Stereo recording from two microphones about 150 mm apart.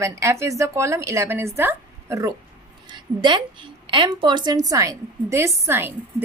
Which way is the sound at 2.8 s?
30° right (ahead or behind).